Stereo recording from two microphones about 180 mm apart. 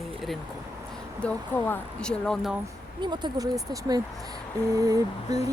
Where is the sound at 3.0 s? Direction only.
25° right (ahead or behind).